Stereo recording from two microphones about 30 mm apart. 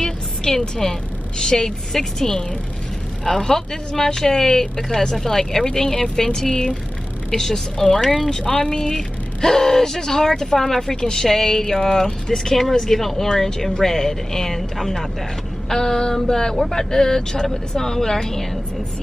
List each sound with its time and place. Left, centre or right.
0.0 s a sound: centre
1.4 s speech: left
4.8 s speech: centre
6.5 s speech: left
7.3 s speech: centre
7.7 s speech: left
8.9 s speech: centre
15.7 s speech: centre